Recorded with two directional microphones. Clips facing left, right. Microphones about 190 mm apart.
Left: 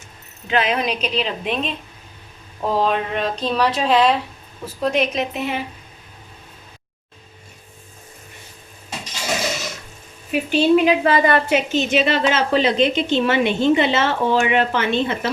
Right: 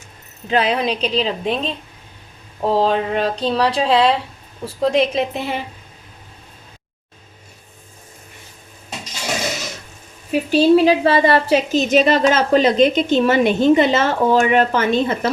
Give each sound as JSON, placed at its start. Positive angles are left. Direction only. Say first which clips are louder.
{"t": 0.4, "sound": "a woman's voice", "louder": "right 2 dB", "side_deg": -35}
{"t": 10.5, "sound": "a woman's voice", "louder": "right 3 dB", "side_deg": -35}